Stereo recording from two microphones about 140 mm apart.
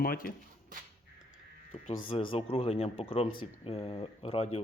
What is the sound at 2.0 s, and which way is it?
Speech, 40° left (ahead or behind).